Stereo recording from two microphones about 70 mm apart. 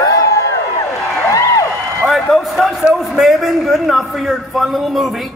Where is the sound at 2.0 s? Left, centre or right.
Centre.